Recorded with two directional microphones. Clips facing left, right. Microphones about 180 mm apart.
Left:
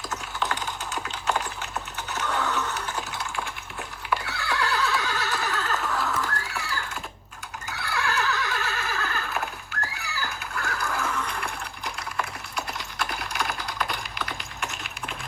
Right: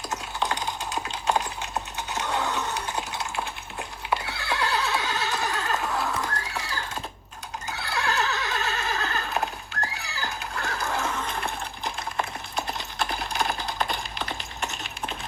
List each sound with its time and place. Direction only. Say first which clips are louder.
0.1 s typing: right 2 dB; 15° right (ahead or behind)
2.0 s a sound: even; 15° right (ahead or behind)
7.7 s neigh: even; 25° right (ahead or behind)